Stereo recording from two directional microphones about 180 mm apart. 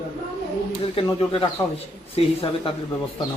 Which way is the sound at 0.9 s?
30° left (ahead or behind).